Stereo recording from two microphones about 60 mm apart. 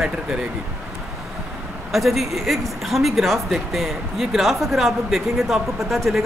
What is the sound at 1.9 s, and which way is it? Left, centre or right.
Speech, centre.